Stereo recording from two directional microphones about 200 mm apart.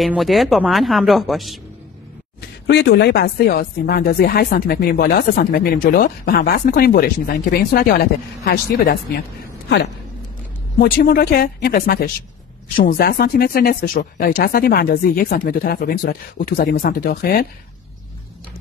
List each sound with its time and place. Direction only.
0.0 s speech: centre (ahead or behind)
2.6 s speech: 60° left (ahead or behind)
10.8 s speech: 50° left (ahead or behind)